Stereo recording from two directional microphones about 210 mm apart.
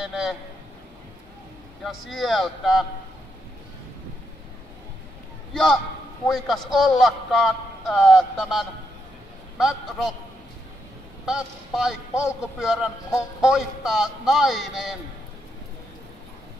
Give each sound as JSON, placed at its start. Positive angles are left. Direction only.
{"t": 0.0, "sound": "a man's voice", "side_deg": 0}
{"t": 1.9, "sound": "a man's voice", "side_deg": 0}
{"t": 5.5, "sound": "a man's voice", "side_deg": 0}
{"t": 11.2, "sound": "a man's voice", "side_deg": 0}